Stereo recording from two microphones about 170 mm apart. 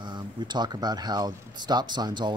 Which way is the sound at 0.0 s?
25° right (ahead or behind).